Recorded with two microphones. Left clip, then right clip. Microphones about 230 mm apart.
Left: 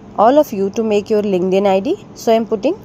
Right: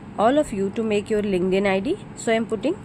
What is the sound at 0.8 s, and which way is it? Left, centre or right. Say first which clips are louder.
A woman's voice: left 8 dB; right.